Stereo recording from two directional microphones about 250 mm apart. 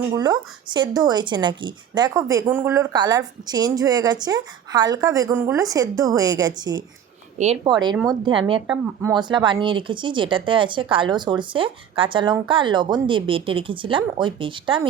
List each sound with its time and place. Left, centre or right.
0.1 s a woman's voice: centre
8.6 s speech: centre